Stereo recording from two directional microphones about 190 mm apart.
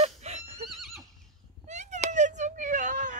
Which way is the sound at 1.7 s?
35° right (ahead or behind).